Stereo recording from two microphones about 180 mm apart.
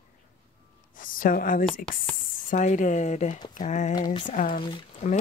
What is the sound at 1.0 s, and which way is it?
Speech, 50° left (ahead or behind).